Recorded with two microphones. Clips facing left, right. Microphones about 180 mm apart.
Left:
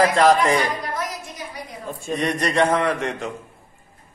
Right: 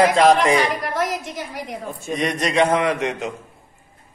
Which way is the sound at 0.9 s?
90° right.